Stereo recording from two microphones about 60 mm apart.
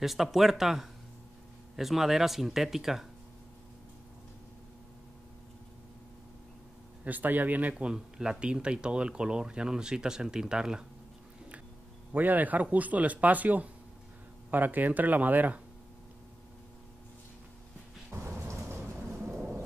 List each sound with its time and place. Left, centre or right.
0.0 s speech: centre
7.1 s a man's voice: right
7.7 s speech: centre
12.1 s a man's voice: right
19.1 s thunder: right